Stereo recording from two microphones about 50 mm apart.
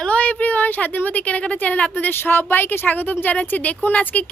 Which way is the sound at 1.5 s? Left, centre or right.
Left.